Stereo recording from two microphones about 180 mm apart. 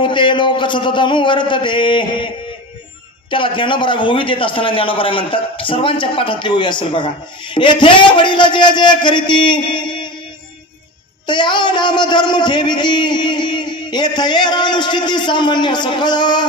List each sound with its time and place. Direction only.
0.0 s a man's voice: 25° left (ahead or behind)
11.2 s a man's voice: 25° left (ahead or behind)